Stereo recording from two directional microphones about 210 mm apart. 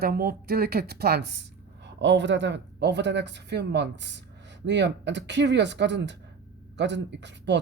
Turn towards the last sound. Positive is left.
turn(degrees=-55)  # may be behind; listen again after turning